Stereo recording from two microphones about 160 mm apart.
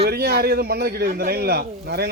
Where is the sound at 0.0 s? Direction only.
75° right (ahead or behind).